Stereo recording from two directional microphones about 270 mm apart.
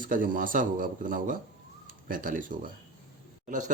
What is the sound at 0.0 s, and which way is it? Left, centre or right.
Speech, right.